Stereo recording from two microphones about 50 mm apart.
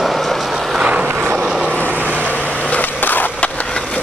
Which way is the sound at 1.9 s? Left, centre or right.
Right.